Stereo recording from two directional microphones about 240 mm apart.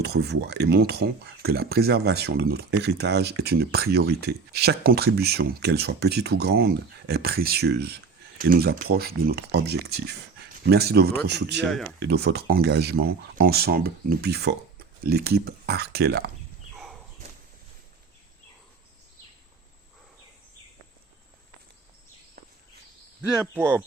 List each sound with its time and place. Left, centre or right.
0.0 s speech: right
11.7 s speech: centre
11.9 s speech: right
16.7 s a sound: centre
23.3 s speech: centre